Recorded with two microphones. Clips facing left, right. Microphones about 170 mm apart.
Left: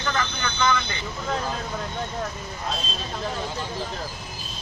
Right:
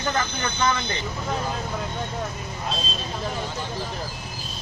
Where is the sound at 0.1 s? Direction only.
30° right (ahead or behind).